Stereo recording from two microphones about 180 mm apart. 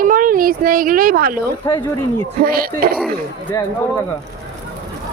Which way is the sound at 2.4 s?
55° right (ahead or behind).